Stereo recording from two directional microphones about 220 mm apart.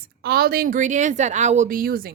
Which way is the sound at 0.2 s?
45° right (ahead or behind).